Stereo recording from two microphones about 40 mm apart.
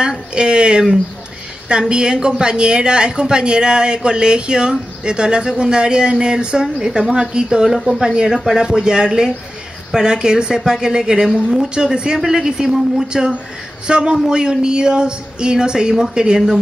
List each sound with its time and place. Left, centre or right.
0.0 s a woman's voice: right